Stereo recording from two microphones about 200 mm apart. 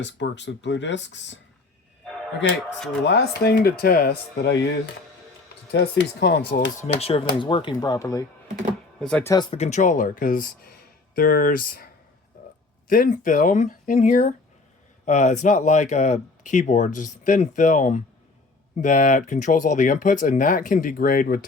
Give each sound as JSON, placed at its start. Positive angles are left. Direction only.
{"t": 0.0, "sound": "speech", "side_deg": 65}
{"t": 3.0, "sound": "speech", "side_deg": 55}
{"t": 5.7, "sound": "speech", "side_deg": 55}
{"t": 7.0, "sound": "speech", "side_deg": 30}
{"t": 9.0, "sound": "speech", "side_deg": 5}
{"t": 9.3, "sound": "speech", "side_deg": 25}
{"t": 12.9, "sound": "speech", "side_deg": 40}